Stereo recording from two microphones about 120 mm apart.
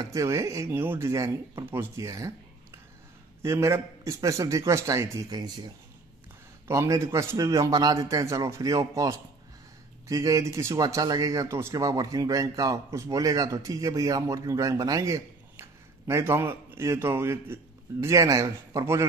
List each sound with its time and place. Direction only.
0.0 s speech: 25° right (ahead or behind)
6.7 s speech: 25° right (ahead or behind)